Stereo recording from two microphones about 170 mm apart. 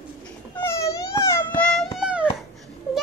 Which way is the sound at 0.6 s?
15° left (ahead or behind).